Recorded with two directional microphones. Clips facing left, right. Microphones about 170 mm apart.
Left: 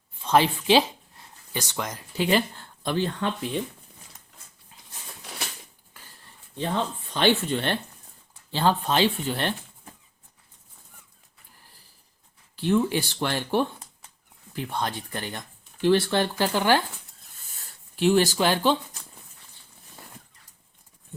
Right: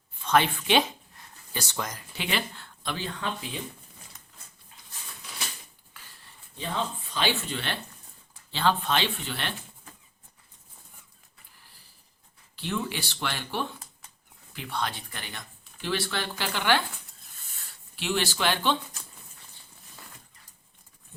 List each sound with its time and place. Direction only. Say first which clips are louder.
0.2 s a sound: left 3 dB; 30° left (ahead or behind)
1.5 s speech: left 3 dB; 15° left (ahead or behind)
2.1 s speech: left 9 dB; 40° left (ahead or behind)
7.1 s speech: left 9 dB; 55° left (ahead or behind)
12.5 s speech: left 9 dB; 45° left (ahead or behind)
18.0 s speech: left 7 dB; 45° left (ahead or behind)